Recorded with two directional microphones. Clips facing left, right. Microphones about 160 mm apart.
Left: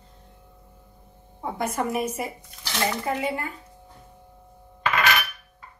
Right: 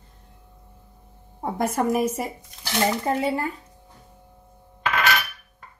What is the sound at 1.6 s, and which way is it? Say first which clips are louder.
A woman's voice: right 4 dB; 45° right (ahead or behind).